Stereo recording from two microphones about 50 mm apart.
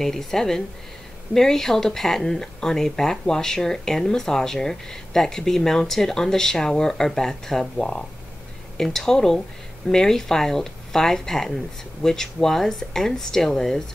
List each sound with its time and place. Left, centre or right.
0.0 s speech: centre